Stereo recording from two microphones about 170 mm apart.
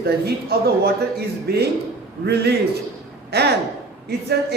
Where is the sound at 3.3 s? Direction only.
75° right (ahead or behind).